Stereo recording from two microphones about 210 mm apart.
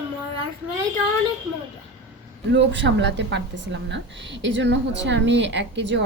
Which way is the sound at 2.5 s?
55° right (ahead or behind).